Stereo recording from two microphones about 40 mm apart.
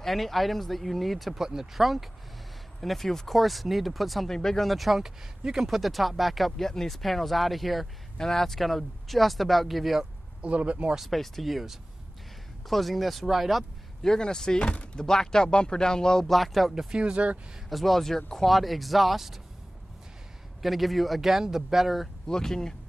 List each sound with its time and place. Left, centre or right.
0.0 s speech: centre
1.4 s speech: centre
4.3 s speech: centre
4.6 s speech: centre
5.4 s speech: centre
5.8 s speech: centre
10.4 s speech: right
11.0 s speech: centre
14.0 s speech: centre
16.3 s speech: centre
16.7 s speech: right
17.6 s speech: centre
20.6 s speech: centre
22.3 s speech: centre